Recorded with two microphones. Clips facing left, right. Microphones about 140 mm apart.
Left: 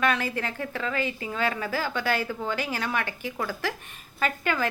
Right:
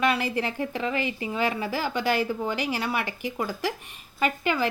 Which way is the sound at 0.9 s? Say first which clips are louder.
Right 1 dB; 45° left (ahead or behind).